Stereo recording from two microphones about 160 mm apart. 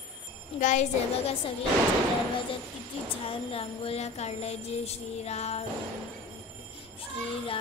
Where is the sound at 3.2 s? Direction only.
35° left (ahead or behind).